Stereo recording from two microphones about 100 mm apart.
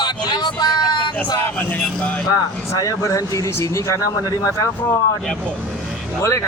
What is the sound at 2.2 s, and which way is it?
Speech, 35° left (ahead or behind).